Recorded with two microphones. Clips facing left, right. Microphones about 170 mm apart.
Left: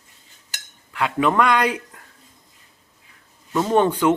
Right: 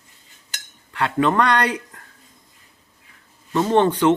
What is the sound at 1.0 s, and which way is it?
Speech, 10° left (ahead or behind).